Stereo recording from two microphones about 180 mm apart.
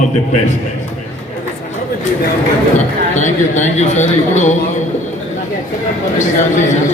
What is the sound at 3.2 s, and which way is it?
A man's voice, 40° left (ahead or behind).